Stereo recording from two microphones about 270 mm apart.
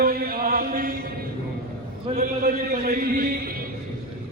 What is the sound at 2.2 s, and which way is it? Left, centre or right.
A man's voice, right.